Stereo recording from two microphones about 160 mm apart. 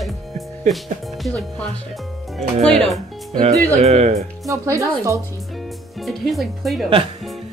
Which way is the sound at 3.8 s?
40° right (ahead or behind).